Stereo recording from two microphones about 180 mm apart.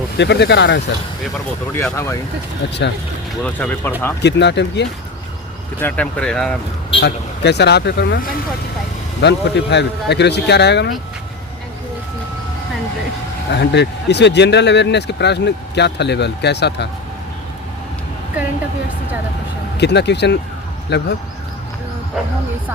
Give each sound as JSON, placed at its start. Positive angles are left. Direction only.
{"t": 0.2, "sound": "speech", "side_deg": 70}
{"t": 1.7, "sound": "speech", "side_deg": 15}
{"t": 3.4, "sound": "speech", "side_deg": 5}
{"t": 4.2, "sound": "speech", "side_deg": 70}
{"t": 5.8, "sound": "speech", "side_deg": 5}
{"t": 7.0, "sound": "speech", "side_deg": 70}
{"t": 9.2, "sound": "speech", "side_deg": 70}
{"t": 13.5, "sound": "speech", "side_deg": 70}
{"t": 19.7, "sound": "speech", "side_deg": 70}